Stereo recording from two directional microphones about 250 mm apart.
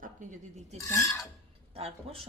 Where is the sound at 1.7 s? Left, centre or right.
Right.